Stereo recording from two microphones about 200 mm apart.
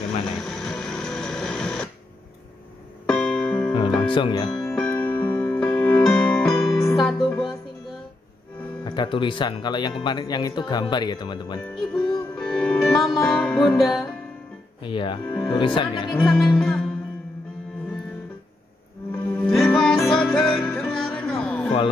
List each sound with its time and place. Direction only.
0.0 s a sound: centre (ahead or behind)
3.1 s music: 5° left (ahead or behind)
3.7 s music: 25° left (ahead or behind)
4.6 s music: 5° left (ahead or behind)
8.8 s speech: 25° left (ahead or behind)
12.4 s music: 5° left (ahead or behind)
14.8 s speech: 25° left (ahead or behind)
15.2 s speech: 10° left (ahead or behind)
15.5 s speech: 25° left (ahead or behind)
16.1 s music: centre (ahead or behind)
19.4 s music: centre (ahead or behind)